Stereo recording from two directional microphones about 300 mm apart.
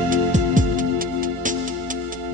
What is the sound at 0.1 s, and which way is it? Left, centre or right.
Music, right.